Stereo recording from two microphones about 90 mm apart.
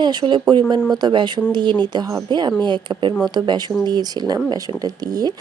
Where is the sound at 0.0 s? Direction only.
55° right (ahead or behind).